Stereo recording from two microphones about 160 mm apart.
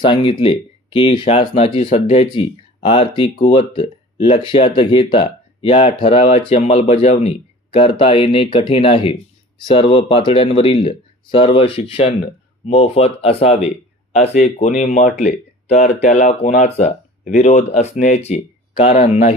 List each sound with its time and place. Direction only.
0.0 s speech: 30° left (ahead or behind)